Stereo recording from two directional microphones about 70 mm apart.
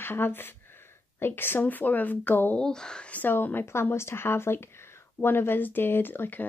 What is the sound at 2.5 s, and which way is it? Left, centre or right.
Speech, centre.